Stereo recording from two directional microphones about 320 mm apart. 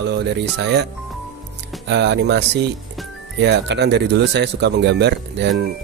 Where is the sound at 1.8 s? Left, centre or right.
Right.